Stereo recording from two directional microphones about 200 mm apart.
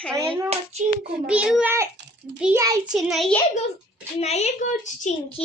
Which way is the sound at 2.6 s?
15° right (ahead or behind).